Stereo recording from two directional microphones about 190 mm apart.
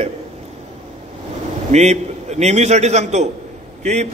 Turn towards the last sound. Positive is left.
turn(degrees=-40)  # may be behind; listen again after turning